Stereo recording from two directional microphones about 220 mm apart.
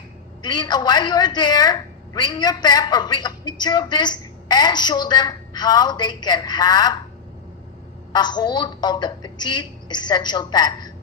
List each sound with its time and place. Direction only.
0.4 s a woman's voice: 20° left (ahead or behind)
8.1 s a woman's voice: 20° left (ahead or behind)